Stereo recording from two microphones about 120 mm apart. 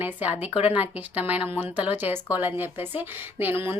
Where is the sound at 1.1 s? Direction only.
15° right (ahead or behind).